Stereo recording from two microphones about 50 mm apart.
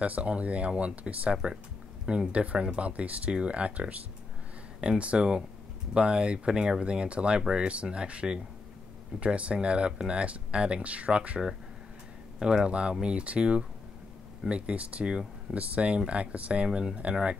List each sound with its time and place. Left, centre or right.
0.0 s speech: right